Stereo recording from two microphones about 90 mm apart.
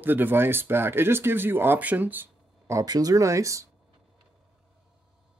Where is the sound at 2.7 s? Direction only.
40° right (ahead or behind).